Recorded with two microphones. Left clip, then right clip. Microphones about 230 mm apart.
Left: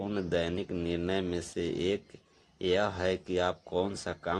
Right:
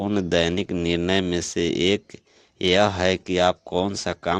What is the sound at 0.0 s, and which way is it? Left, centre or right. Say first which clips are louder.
Speech: right 10 dB; right.